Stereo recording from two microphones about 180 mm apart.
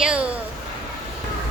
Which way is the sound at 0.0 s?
5° right (ahead or behind).